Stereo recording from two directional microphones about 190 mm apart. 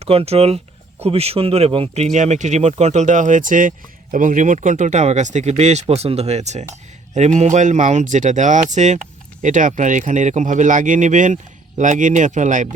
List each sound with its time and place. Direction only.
0.0 s speech: 30° right (ahead or behind)